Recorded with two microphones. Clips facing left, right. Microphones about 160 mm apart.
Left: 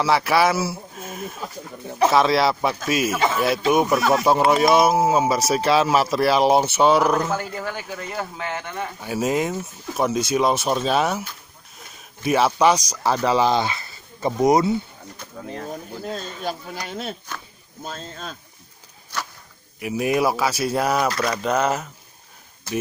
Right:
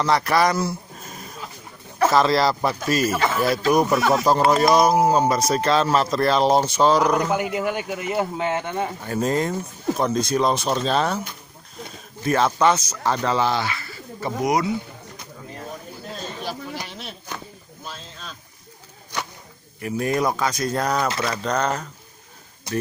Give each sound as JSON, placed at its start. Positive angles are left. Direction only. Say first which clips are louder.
{"t": 0.0, "sound": "speech", "louder": "left 1 dB", "side_deg": 5}
{"t": 7.2, "sound": "speech", "louder": "right 2 dB", "side_deg": -15}
{"t": 9.0, "sound": "speech", "louder": "left 2 dB", "side_deg": 5}
{"t": 19.1, "sound": "whip", "louder": "right 1 dB", "side_deg": -15}
{"t": 19.8, "sound": "speech", "louder": "left 2 dB", "side_deg": 10}